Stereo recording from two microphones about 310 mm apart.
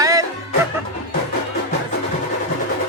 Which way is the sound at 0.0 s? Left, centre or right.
Centre.